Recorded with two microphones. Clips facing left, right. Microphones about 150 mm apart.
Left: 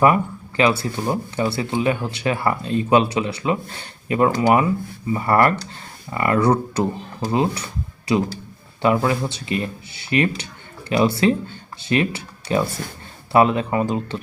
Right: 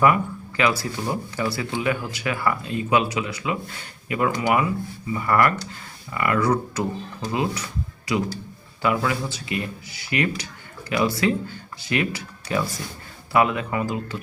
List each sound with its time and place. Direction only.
0.0 s speech: 30° left (ahead or behind)